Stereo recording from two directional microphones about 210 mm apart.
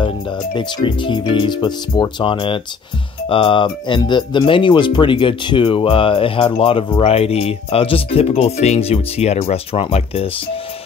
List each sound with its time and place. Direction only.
0.6 s speech: 20° left (ahead or behind)